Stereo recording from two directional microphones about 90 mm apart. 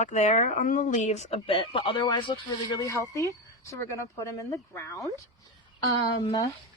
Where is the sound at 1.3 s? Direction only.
90° left; by 2.8 s 60° left (ahead or behind).